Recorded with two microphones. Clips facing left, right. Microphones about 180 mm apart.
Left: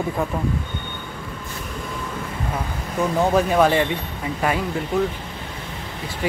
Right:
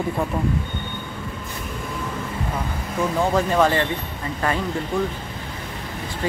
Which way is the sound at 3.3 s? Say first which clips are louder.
Left 2 dB; 10° left (ahead or behind).